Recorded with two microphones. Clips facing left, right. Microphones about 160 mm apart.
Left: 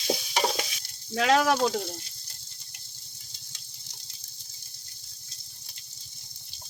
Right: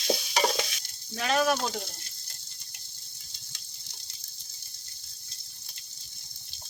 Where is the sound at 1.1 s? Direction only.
90° left.